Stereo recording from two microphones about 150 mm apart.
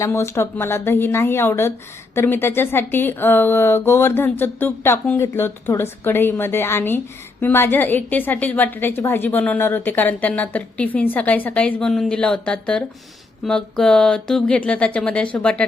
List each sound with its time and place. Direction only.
0.0 s a woman's voice: 15° left (ahead or behind)